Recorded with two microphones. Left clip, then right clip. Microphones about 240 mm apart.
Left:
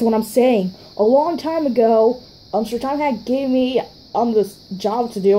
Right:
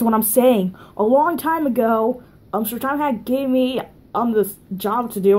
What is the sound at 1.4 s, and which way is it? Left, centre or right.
Speech, right.